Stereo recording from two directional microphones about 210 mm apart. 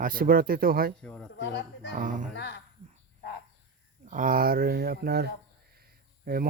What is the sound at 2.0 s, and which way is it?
Speech, 40° right (ahead or behind).